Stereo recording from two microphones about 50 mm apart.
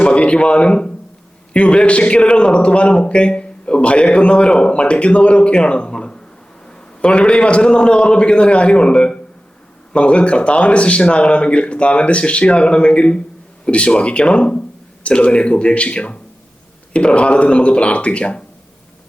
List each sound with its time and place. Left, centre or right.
0.0 s a man's voice: left